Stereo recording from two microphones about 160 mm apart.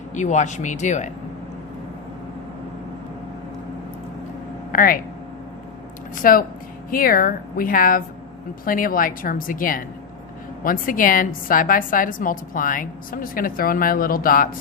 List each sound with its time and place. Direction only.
0.1 s speech: 50° left (ahead or behind)
4.7 s speech: 65° left (ahead or behind)
6.1 s a woman's voice: 60° left (ahead or behind)